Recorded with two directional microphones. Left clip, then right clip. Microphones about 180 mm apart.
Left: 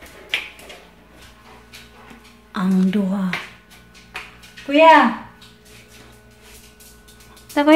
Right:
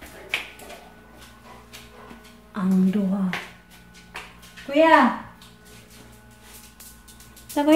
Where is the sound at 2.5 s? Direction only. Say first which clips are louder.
Left 3 dB; 30° left (ahead or behind).